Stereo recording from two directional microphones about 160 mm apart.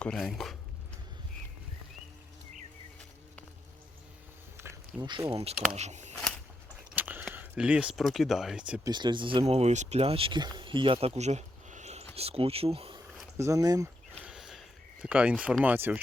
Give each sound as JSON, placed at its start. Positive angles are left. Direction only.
{"t": 0.0, "sound": "speech", "side_deg": 5}
{"t": 4.5, "sound": "a sound", "side_deg": -15}
{"t": 5.3, "sound": "speech", "side_deg": -40}
{"t": 6.9, "sound": "a sound", "side_deg": -10}
{"t": 7.3, "sound": "speech", "side_deg": -10}
{"t": 8.8, "sound": "speech", "side_deg": -30}
{"t": 9.5, "sound": "speech", "side_deg": -45}
{"t": 13.3, "sound": "speech", "side_deg": -20}
{"t": 14.3, "sound": "a sound", "side_deg": -5}
{"t": 15.0, "sound": "speech", "side_deg": -5}